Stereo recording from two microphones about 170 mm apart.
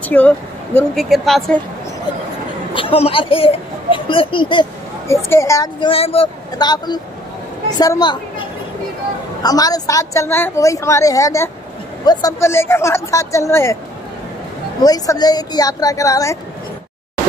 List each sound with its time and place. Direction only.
0.1 s a woman's voice: 10° left (ahead or behind)
0.9 s speech: centre (ahead or behind)
2.7 s speech: 30° left (ahead or behind)
5.0 s a woman's voice: 15° left (ahead or behind)
5.9 s a woman's voice: 35° left (ahead or behind); by 13.7 s 15° left (ahead or behind)
14.8 s a woman's voice: 25° left (ahead or behind)